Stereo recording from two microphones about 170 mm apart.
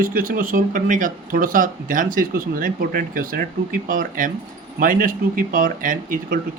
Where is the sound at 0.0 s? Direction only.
55° right (ahead or behind).